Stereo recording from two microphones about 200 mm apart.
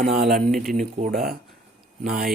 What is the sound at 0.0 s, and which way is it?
Speech, 50° right (ahead or behind).